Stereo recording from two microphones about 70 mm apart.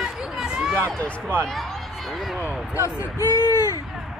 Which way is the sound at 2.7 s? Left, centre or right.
Left.